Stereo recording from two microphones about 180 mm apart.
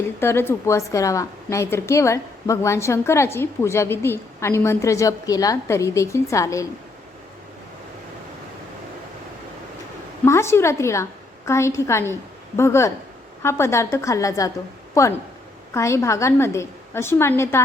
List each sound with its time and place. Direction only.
0.2 s a woman's voice: 15° left (ahead or behind)
10.2 s a woman's voice: 15° left (ahead or behind)